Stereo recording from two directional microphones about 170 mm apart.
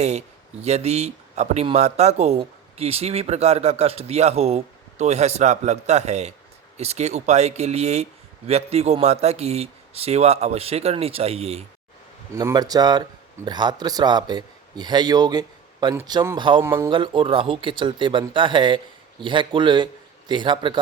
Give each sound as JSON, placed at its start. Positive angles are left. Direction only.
{"t": 0.0, "sound": "speech", "side_deg": -40}
{"t": 12.3, "sound": "speech", "side_deg": -20}
{"t": 16.9, "sound": "speech", "side_deg": -30}